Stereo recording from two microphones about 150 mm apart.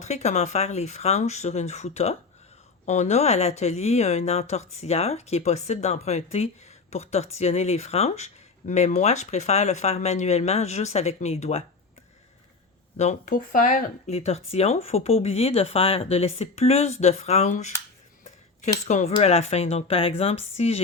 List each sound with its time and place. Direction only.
0.0 s speech: 50° left (ahead or behind)
13.0 s speech: 50° left (ahead or behind)
14.1 s speech: 45° left (ahead or behind)
18.9 s speech: 50° left (ahead or behind)